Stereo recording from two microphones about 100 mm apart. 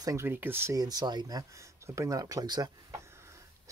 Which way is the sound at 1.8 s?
30° right (ahead or behind).